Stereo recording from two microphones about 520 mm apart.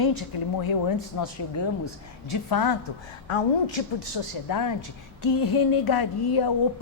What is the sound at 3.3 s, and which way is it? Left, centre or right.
Speech, left.